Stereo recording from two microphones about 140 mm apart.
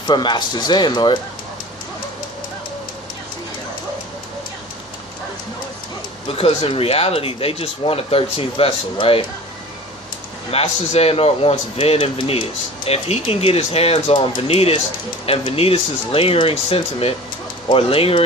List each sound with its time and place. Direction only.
0.1 s speech: 35° left (ahead or behind)
6.2 s a man's voice: 40° left (ahead or behind)
10.5 s a man's voice: 45° left (ahead or behind)